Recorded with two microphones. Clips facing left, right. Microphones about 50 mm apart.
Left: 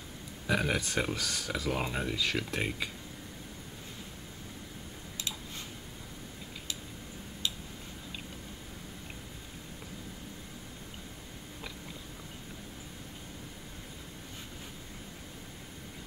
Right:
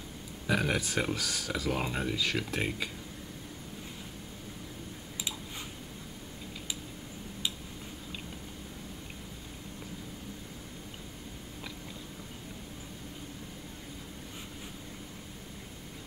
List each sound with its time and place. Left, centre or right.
0.5 s speech: centre